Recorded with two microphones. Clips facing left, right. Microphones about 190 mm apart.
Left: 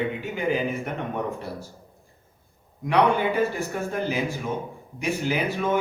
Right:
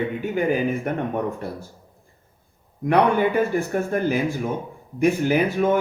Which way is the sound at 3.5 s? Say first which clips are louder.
Right 5 dB; 50° right (ahead or behind).